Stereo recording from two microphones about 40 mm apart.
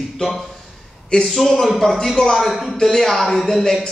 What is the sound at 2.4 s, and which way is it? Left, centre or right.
A man's voice, centre.